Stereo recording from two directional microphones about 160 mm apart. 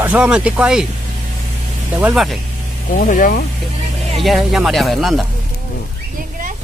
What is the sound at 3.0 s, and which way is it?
Speech, 60° left (ahead or behind).